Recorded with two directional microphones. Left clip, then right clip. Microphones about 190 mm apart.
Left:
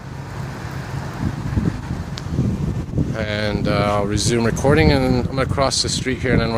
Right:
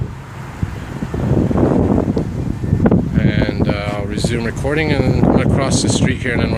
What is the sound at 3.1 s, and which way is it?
Speech, 20° left (ahead or behind).